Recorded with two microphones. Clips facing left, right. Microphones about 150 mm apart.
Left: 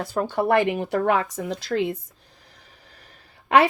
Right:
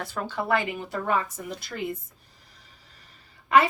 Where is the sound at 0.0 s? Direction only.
40° left (ahead or behind); by 2.0 s 90° left.